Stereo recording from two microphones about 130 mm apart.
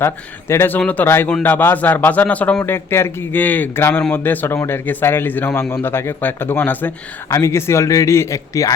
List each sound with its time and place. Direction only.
0.0 s speech: 20° left (ahead or behind)